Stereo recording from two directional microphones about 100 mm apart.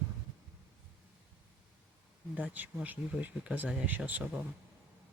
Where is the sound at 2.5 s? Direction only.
15° right (ahead or behind).